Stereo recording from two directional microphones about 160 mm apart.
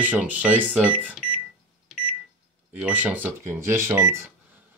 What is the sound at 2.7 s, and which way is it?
Speech, 10° right (ahead or behind).